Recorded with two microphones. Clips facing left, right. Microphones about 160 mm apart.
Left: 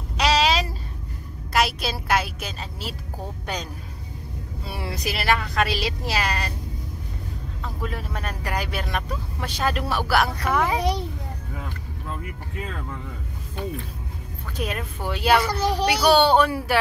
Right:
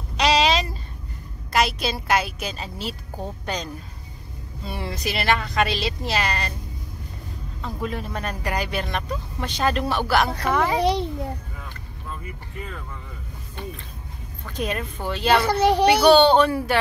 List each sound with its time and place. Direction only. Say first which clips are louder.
0.2 s a sound: right 1 dB; 5° left (ahead or behind)
1.5 s a woman's voice: right 1 dB; 5° left (ahead or behind)
7.6 s speech: right 3 dB; centre (ahead or behind)
14.6 s a woman's voice: right 2 dB; 5° left (ahead or behind)
15.6 s speech: right 5 dB; 60° right (ahead or behind)
16.1 s a woman's voice: right 1 dB; 10° left (ahead or behind)